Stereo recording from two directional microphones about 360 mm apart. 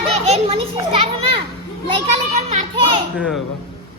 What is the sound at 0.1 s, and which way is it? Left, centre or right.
Children playing, centre.